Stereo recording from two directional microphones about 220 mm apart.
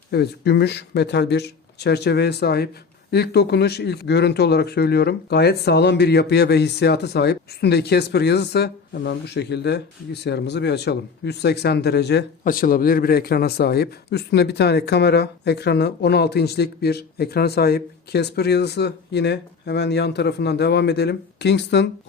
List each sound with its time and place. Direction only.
0.1 s speech: 50° left (ahead or behind)